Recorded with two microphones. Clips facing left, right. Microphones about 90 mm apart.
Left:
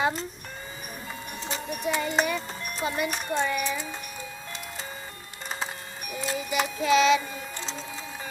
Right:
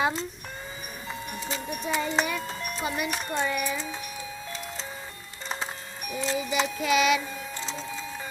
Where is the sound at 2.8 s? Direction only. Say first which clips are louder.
Left 2 dB; 10° right (ahead or behind).